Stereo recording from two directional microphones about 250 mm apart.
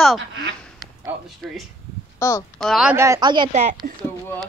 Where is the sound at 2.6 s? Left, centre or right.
Centre; by 3.7 s right.